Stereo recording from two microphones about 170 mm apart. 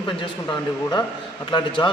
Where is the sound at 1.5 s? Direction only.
30° left (ahead or behind).